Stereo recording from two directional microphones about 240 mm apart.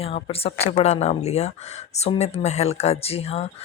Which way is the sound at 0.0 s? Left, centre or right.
Left.